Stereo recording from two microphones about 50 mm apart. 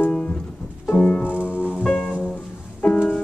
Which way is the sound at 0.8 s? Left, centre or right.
Left.